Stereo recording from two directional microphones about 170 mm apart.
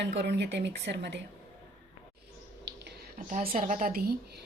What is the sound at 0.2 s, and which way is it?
Speech, 80° right.